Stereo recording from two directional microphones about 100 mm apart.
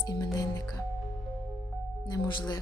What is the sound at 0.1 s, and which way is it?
Speech, 40° left (ahead or behind).